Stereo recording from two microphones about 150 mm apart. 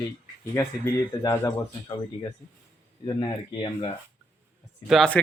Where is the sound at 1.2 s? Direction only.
25° left (ahead or behind).